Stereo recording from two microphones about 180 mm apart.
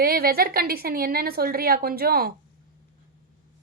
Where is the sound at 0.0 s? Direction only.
55° right (ahead or behind).